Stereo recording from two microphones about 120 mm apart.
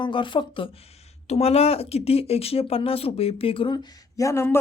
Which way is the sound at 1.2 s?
60° left (ahead or behind).